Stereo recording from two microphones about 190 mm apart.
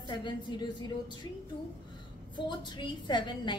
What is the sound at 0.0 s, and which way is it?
A woman's voice, 25° left (ahead or behind).